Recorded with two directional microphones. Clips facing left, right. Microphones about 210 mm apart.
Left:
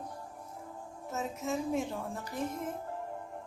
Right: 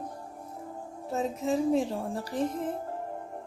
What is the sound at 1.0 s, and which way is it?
Speech, 35° right (ahead or behind).